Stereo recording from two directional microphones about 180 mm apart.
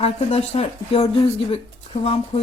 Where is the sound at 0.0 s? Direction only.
35° left (ahead or behind).